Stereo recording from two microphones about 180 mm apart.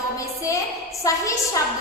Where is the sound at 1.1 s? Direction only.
20° left (ahead or behind).